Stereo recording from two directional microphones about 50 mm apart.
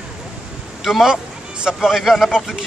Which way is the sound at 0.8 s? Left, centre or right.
Centre.